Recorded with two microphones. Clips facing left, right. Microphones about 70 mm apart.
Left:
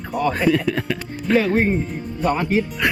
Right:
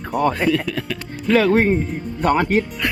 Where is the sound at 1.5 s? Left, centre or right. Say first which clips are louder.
Right 2 dB; right.